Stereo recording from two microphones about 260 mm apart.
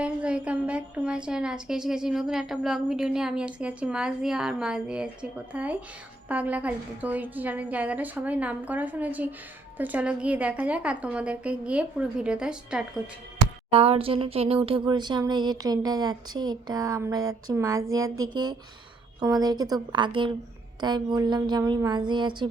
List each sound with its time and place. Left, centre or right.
0.0 s a woman's voice: centre
13.7 s speech: right